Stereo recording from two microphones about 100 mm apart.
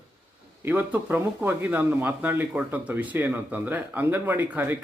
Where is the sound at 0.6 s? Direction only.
15° right (ahead or behind).